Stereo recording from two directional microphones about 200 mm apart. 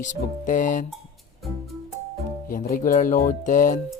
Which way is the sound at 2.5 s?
45° left (ahead or behind).